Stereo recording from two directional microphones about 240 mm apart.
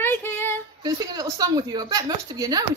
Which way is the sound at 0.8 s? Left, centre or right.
Centre.